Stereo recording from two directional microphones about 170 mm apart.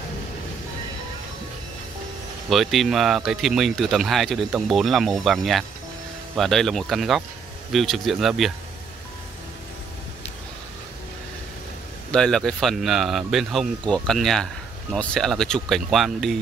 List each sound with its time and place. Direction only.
2.5 s speech: centre (ahead or behind)
12.1 s speech: 5° left (ahead or behind)